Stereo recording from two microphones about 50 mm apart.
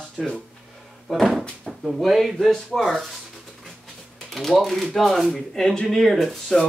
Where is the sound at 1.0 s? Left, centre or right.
Centre.